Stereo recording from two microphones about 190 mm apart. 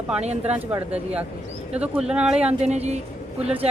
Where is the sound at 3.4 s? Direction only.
5° right (ahead or behind).